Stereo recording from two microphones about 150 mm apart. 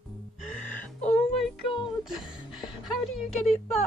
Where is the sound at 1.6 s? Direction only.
35° left (ahead or behind).